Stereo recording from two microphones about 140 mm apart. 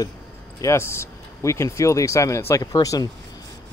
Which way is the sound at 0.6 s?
20° left (ahead or behind).